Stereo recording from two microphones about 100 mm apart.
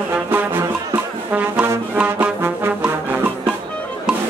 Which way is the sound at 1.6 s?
20° right (ahead or behind).